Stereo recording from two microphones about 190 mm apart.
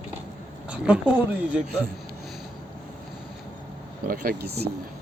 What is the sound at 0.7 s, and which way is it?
Speech, 5° right (ahead or behind).